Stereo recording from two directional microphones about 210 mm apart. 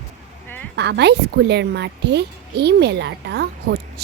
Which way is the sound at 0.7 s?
55° right (ahead or behind).